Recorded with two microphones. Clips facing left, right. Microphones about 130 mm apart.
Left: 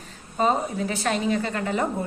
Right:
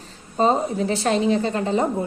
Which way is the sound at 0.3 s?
30° right (ahead or behind).